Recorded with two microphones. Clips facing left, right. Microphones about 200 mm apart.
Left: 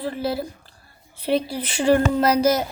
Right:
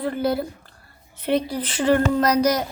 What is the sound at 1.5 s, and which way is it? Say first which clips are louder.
Speech: left 1 dB; 10° left (ahead or behind).